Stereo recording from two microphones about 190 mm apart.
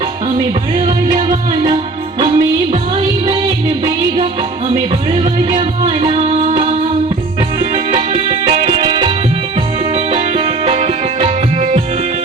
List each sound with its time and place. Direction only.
0.3 s music: 25° right (ahead or behind)
5.8 s music: 30° right (ahead or behind)
7.9 s music: 30° right (ahead or behind)